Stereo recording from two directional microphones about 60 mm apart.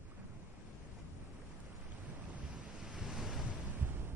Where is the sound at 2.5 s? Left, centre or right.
Centre.